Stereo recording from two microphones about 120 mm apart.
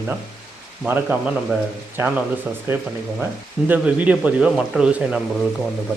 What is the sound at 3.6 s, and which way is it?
Speech, 10° right (ahead or behind).